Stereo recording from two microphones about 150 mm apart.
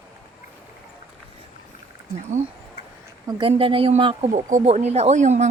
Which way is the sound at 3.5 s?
40° right (ahead or behind).